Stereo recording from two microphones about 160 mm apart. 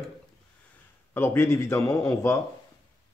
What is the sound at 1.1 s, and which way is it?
Speech, 15° left (ahead or behind).